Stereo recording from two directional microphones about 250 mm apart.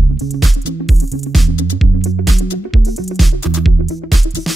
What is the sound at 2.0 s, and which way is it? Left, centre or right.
Music, centre.